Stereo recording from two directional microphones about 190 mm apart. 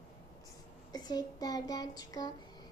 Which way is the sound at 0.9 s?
20° left (ahead or behind).